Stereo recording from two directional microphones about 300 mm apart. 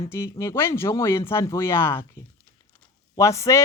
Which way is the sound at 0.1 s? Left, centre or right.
Centre.